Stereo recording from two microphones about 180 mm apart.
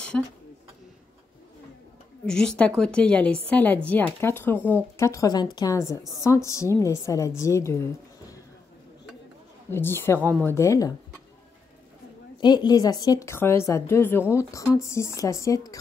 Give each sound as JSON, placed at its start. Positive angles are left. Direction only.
{"t": 0.1, "sound": "a woman's voice", "side_deg": 5}
{"t": 2.2, "sound": "a woman's voice", "side_deg": 5}
{"t": 9.7, "sound": "a woman's voice", "side_deg": 10}
{"t": 12.4, "sound": "a woman's voice", "side_deg": 25}